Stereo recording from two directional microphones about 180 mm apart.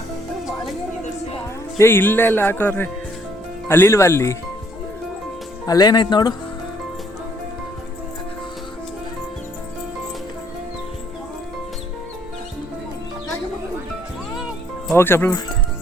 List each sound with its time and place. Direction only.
1.8 s speech: 10° left (ahead or behind)
5.6 s speech: 20° left (ahead or behind)
14.9 s speech: 10° left (ahead or behind)